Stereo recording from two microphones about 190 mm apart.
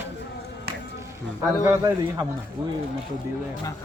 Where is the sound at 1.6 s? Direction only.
10° right (ahead or behind).